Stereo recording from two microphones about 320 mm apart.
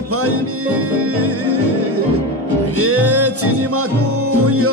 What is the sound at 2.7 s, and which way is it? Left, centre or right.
Music, right.